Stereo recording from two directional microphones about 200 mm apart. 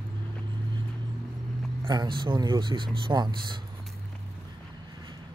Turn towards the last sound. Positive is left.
turn(degrees=-20)  # may be behind; listen again after turning